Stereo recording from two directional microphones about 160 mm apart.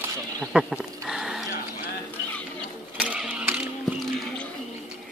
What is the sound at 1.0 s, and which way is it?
Dog, centre (ahead or behind).